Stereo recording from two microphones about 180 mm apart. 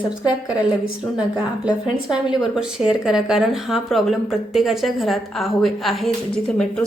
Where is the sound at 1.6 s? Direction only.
25° left (ahead or behind).